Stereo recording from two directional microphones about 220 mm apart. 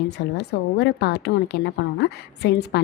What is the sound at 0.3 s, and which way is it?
Speech, 45° left (ahead or behind).